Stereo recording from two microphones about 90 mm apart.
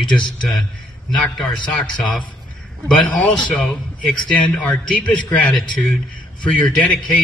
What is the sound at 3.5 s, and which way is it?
A man's voice, 15° left (ahead or behind).